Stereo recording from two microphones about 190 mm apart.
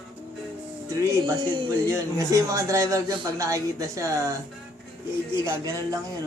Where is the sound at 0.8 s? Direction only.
15° right (ahead or behind).